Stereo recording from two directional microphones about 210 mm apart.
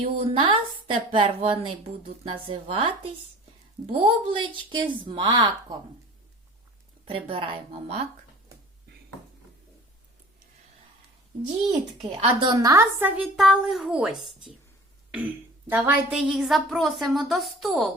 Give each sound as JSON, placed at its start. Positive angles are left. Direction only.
{"t": 0.0, "sound": "a woman's voice", "side_deg": -25}
{"t": 3.9, "sound": "a woman's voice", "side_deg": -25}
{"t": 7.1, "sound": "a woman's voice", "side_deg": -25}
{"t": 12.2, "sound": "a woman's voice", "side_deg": -25}